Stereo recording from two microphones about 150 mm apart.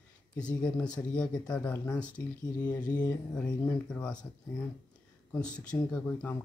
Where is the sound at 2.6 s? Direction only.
25° left (ahead or behind).